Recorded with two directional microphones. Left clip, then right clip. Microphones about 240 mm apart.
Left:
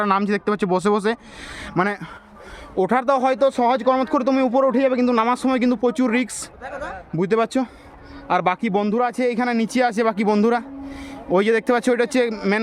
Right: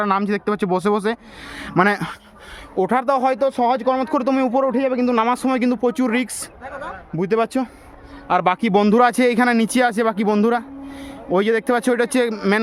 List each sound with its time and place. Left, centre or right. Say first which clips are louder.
0.0 s speech: even; centre
1.5 s speech: right 3 dB; centre
1.8 s speech: right 5 dB; right
2.7 s speech: even; centre
6.7 s a sound: even; left
7.2 s speech: even; centre
8.6 s speech: right 6 dB; right; by 12.5 s centre